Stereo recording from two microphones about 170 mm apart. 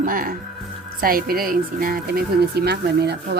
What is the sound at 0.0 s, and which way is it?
Speech, 55° right (ahead or behind).